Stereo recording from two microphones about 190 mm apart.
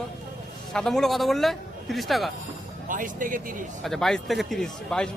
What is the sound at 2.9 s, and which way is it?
Speech, 45° right (ahead or behind).